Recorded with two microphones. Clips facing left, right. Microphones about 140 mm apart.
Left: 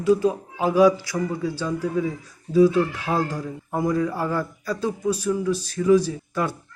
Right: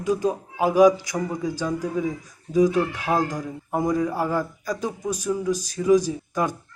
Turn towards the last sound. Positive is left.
turn(degrees=-15)  # may be behind; listen again after turning